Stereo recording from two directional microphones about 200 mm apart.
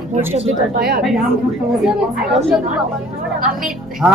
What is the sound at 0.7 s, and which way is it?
Speech, 50° right (ahead or behind).